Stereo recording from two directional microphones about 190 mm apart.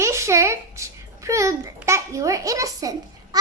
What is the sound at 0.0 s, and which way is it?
Babbling, 15° right (ahead or behind).